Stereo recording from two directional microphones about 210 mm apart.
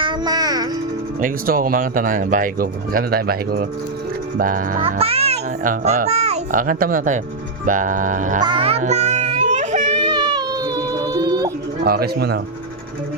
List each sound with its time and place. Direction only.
0.0 s music: 20° right (ahead or behind)
1.2 s speech: 40° right (ahead or behind)
4.4 s music: 40° right (ahead or behind)
4.9 s a child's voice: 30° right (ahead or behind)
7.6 s music: 40° right (ahead or behind)
8.4 s music: 25° right (ahead or behind)
10.0 s a sound: 20° right (ahead or behind)
11.9 s speech: 45° right (ahead or behind)